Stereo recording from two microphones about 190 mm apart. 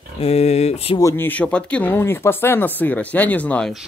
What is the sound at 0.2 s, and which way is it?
Speech, 35° left (ahead or behind).